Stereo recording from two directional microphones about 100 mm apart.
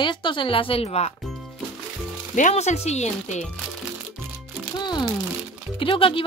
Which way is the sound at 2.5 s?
90° left.